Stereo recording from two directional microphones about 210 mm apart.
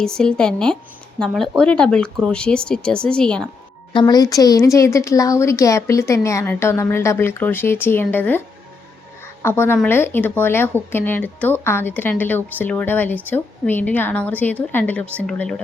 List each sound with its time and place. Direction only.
0.0 s speech: 5° left (ahead or behind)
3.9 s speech: 20° left (ahead or behind)
9.2 s music: 10° left (ahead or behind)
9.7 s speech: 10° left (ahead or behind)